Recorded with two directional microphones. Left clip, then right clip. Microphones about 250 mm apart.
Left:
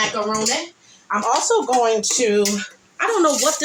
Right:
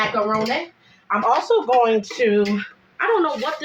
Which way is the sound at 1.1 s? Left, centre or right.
Centre.